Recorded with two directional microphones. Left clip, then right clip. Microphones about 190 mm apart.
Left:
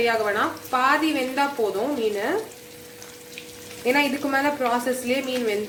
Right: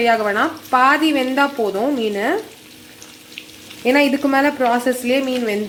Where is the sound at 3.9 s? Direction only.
45° right (ahead or behind).